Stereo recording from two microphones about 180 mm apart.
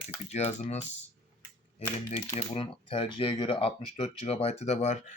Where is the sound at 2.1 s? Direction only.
35° left (ahead or behind).